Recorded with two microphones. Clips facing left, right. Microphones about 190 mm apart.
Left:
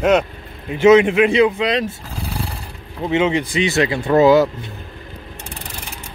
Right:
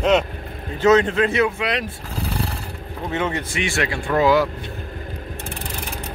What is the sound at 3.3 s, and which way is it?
Speech, 15° left (ahead or behind).